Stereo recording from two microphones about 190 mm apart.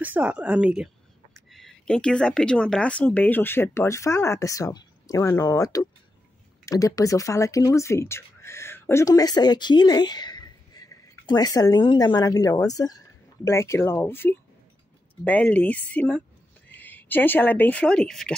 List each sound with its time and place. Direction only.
0.0 s speech: 10° right (ahead or behind)